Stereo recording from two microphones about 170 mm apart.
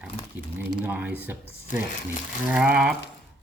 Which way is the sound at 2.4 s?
5° right (ahead or behind).